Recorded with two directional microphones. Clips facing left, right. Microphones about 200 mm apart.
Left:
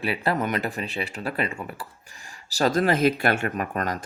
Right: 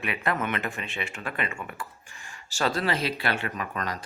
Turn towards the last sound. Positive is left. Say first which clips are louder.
# left 5 dB
turn(degrees=50)  # may be behind; listen again after turning